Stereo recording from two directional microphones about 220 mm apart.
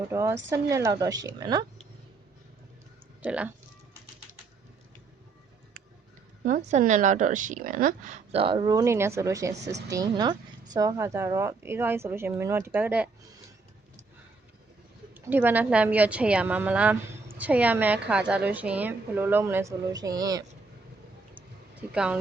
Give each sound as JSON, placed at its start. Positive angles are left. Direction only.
{"t": 0.1, "sound": "speech", "side_deg": -10}
{"t": 3.2, "sound": "speech", "side_deg": -5}
{"t": 6.4, "sound": "a woman's voice", "side_deg": -35}
{"t": 15.1, "sound": "speech", "side_deg": -10}
{"t": 21.3, "sound": "a sound", "side_deg": -5}